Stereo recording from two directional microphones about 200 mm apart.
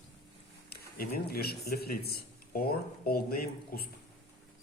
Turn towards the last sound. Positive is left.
turn(degrees=50)  # may be behind; listen again after turning